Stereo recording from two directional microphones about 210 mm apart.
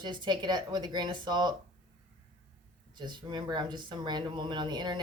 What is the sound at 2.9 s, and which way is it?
Speech, 20° right (ahead or behind).